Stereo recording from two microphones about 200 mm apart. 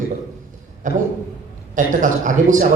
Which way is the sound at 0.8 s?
40° right (ahead or behind).